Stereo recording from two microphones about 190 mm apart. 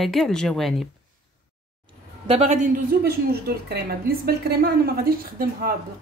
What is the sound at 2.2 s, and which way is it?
Speech, 35° right (ahead or behind).